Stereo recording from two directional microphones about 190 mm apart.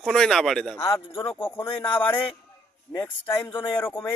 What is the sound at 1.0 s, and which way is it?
Speech, 30° left (ahead or behind).